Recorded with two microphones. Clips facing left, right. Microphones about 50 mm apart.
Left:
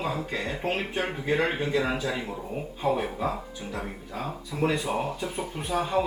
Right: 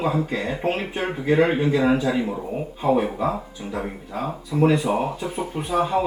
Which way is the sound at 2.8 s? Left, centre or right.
Centre.